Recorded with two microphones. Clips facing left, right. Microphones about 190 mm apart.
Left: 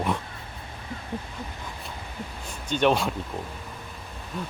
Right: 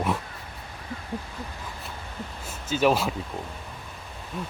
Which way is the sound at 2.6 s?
5° right (ahead or behind).